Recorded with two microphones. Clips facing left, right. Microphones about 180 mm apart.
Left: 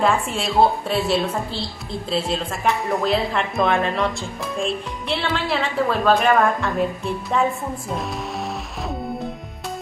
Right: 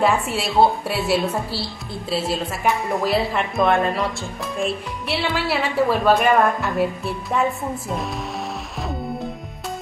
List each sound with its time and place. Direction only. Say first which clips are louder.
0.0 s a woman's voice: right 1 dB; 10° right (ahead or behind)